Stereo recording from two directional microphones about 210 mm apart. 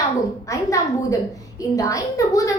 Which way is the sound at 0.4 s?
15° left (ahead or behind).